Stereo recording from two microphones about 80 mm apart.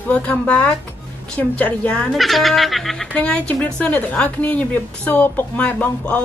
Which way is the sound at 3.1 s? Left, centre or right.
Centre.